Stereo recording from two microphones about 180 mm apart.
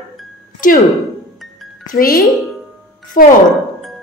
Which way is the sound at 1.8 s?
55° left (ahead or behind).